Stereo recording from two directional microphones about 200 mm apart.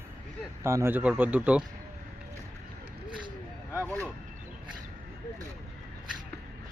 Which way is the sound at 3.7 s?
10° left (ahead or behind).